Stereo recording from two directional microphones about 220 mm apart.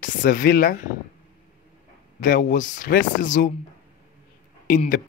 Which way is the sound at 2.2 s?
35° left (ahead or behind).